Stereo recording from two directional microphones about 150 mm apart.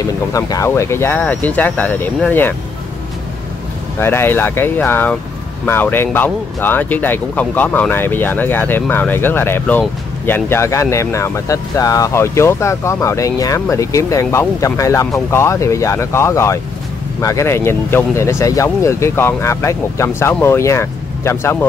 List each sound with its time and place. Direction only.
0.0 s speech: 20° left (ahead or behind)
4.0 s speech: 15° left (ahead or behind)